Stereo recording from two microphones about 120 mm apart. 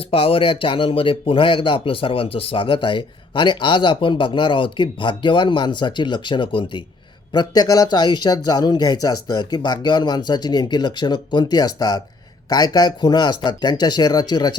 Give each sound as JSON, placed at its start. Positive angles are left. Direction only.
{"t": 0.1, "sound": "speech", "side_deg": 50}